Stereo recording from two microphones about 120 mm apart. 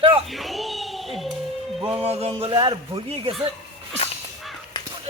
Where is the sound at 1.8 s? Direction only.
55° right (ahead or behind).